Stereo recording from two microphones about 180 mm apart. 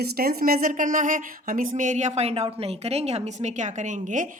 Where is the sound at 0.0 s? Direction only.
55° right (ahead or behind).